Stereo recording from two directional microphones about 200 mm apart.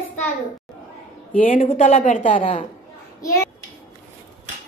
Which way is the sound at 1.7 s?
35° left (ahead or behind).